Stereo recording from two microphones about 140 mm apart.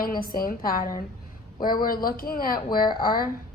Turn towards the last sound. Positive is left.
turn(degrees=90)